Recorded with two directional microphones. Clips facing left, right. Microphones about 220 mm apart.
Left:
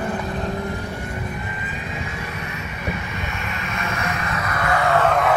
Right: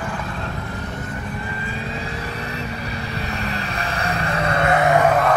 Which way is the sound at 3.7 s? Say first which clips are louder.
Left 1 dB; 35° right (ahead or behind).